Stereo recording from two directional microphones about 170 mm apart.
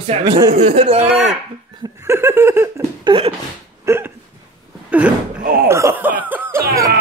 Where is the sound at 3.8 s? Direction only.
15° right (ahead or behind).